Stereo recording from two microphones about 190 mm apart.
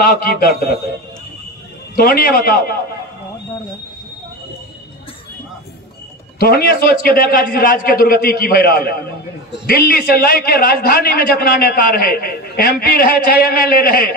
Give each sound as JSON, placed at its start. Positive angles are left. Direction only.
{"t": 0.0, "sound": "a man's voice", "side_deg": 50}
{"t": 2.0, "sound": "a man's voice", "side_deg": 50}
{"t": 6.4, "sound": "a man's voice", "side_deg": 55}